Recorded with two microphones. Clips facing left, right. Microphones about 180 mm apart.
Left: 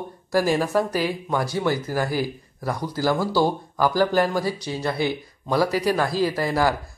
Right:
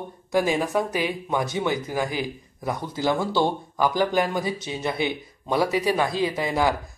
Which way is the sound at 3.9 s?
20° right (ahead or behind).